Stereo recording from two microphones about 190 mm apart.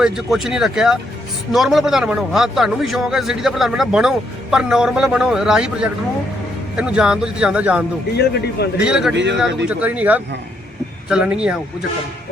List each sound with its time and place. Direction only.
0.0 s a man's voice: centre (ahead or behind)
8.1 s speech: 60° left (ahead or behind)
8.8 s a man's voice: 5° right (ahead or behind)
9.1 s speech: 70° right (ahead or behind)
9.6 s a man's voice: 5° right (ahead or behind)